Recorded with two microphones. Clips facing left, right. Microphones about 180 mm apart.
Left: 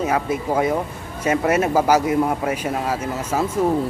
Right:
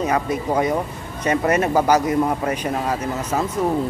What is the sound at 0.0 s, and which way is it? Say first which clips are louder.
A man's voice: even; 5° left (ahead or behind).